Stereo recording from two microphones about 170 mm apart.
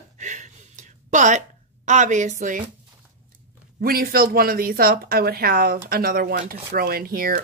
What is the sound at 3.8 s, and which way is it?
Speech, 60° right (ahead or behind).